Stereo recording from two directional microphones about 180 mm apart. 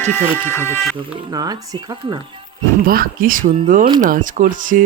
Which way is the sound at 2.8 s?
50° right (ahead or behind).